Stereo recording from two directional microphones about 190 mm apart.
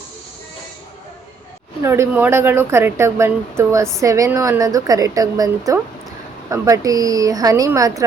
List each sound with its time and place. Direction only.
1.8 s a woman's voice: 15° right (ahead or behind)